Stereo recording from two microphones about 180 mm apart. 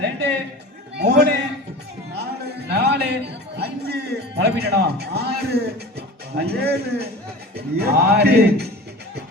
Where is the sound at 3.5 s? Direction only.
65° right (ahead or behind).